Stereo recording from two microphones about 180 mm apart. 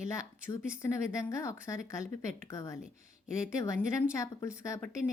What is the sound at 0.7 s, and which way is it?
Speech, 15° left (ahead or behind).